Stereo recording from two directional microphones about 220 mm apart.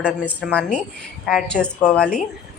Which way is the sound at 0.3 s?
5° left (ahead or behind).